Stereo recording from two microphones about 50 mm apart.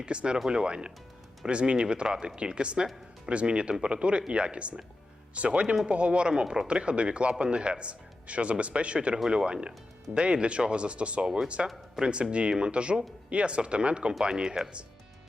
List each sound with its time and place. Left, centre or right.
0.0 s speech: centre